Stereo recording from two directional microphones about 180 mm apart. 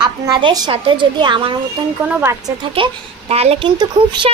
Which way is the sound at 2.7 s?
30° right (ahead or behind).